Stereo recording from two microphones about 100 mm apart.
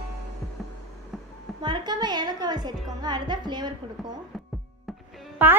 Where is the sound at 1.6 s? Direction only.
45° right (ahead or behind).